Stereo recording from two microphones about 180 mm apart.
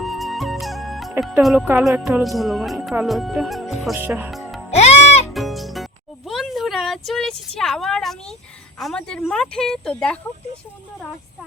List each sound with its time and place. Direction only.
0.0 s music: centre (ahead or behind)
1.2 s speech: centre (ahead or behind)
3.9 s speech: 10° right (ahead or behind)
4.7 s music: 35° left (ahead or behind)
5.3 s music: centre (ahead or behind)
8.8 s speech: 5° left (ahead or behind)